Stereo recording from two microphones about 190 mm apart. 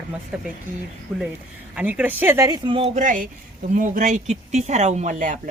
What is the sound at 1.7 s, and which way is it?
Speech, 5° right (ahead or behind).